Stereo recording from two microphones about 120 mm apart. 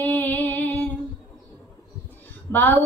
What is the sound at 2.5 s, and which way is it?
Female singing, 15° left (ahead or behind).